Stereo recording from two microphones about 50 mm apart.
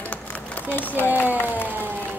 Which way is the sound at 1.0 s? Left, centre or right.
Left.